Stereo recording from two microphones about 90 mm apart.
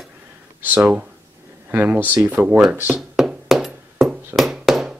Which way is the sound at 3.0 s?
5° right (ahead or behind).